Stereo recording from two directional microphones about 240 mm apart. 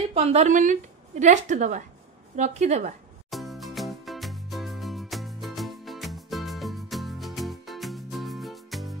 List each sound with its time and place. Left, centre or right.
0.1 s a woman's voice: right
3.3 s music: centre